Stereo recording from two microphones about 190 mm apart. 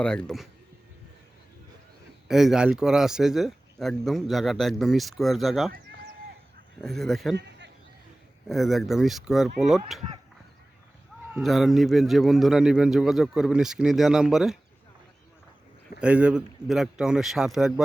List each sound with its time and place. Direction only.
0.0 s speech: 5° left (ahead or behind)
2.2 s speech: centre (ahead or behind)
6.8 s speech: centre (ahead or behind)
7.3 s a sound: 65° right (ahead or behind)
8.4 s speech: centre (ahead or behind)
11.3 s speech: centre (ahead or behind)
16.0 s speech: 5° right (ahead or behind)